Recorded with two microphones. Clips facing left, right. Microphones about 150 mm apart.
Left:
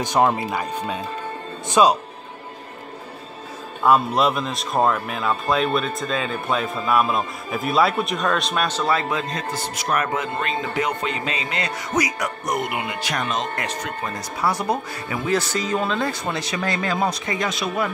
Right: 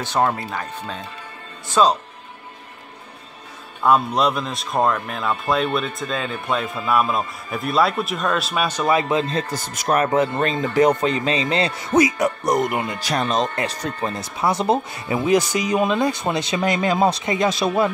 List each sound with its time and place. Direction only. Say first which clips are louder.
0.0 s speech: left 2 dB; 15° left (ahead or behind)
3.8 s speech: even; centre (ahead or behind); by 9.2 s 15° right (ahead or behind)
9.3 s speech: right 2 dB; 30° right (ahead or behind)
12.5 s speech: right 4 dB; 40° right (ahead or behind)